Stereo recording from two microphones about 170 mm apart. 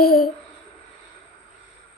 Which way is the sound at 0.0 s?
60° left (ahead or behind).